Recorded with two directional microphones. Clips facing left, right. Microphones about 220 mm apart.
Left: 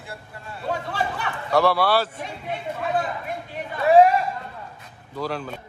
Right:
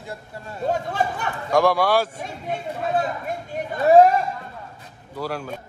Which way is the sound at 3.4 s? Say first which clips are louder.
Right 3 dB; 45° right (ahead or behind).